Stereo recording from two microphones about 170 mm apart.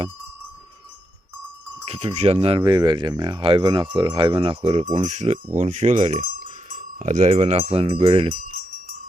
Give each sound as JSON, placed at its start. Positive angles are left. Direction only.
{"t": 1.8, "sound": "speech", "side_deg": -35}
{"t": 6.2, "sound": "speech", "side_deg": -55}
{"t": 8.3, "sound": "wind chime", "side_deg": -55}